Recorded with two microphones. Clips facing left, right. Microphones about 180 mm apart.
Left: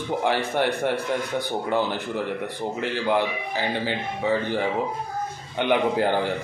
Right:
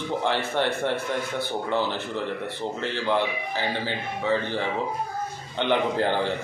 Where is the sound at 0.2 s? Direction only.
10° left (ahead or behind).